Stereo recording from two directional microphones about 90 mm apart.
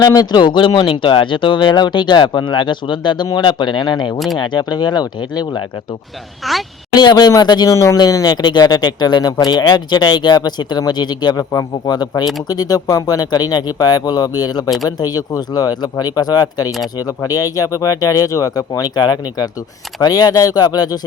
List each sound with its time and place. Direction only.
0.0 s speech: 45° left (ahead or behind)
6.4 s a woman's voice: centre (ahead or behind)
6.9 s speech: 50° left (ahead or behind)
7.7 s speech: 35° left (ahead or behind)